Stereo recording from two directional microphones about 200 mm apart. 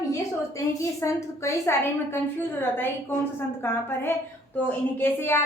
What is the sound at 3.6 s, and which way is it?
A woman's voice, 10° left (ahead or behind).